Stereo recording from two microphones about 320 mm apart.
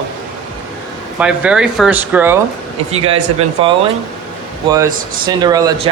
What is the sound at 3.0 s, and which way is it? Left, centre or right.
Speech, centre.